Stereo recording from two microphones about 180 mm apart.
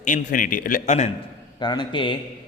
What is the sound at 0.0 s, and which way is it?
A man's voice, 45° left (ahead or behind).